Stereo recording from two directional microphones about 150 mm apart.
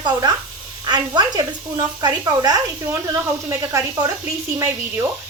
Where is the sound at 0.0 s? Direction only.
25° right (ahead or behind).